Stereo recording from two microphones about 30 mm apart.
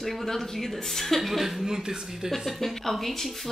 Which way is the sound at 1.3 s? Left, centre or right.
Centre.